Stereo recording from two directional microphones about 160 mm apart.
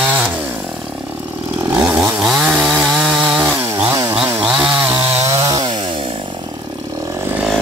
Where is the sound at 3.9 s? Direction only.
20° right (ahead or behind).